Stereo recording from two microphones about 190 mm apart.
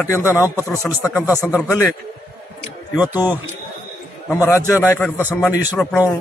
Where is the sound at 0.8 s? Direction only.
15° left (ahead or behind).